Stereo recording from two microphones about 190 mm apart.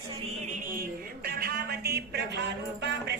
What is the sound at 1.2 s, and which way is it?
Speech, 55° right (ahead or behind).